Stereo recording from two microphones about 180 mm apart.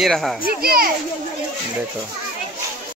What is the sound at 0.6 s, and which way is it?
Speech, 55° right (ahead or behind).